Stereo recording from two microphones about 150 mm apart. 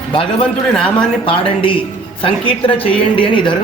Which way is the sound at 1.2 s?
35° left (ahead or behind).